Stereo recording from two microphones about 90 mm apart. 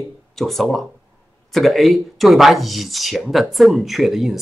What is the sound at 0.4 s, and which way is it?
Speech, centre (ahead or behind).